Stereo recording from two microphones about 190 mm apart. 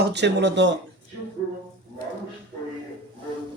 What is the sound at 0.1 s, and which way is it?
Speech, 65° right (ahead or behind).